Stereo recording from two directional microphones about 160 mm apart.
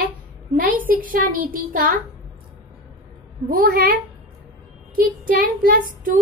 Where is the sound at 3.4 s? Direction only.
65° right (ahead or behind).